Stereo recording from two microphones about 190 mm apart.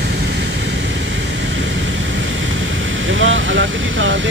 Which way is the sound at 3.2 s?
85° right.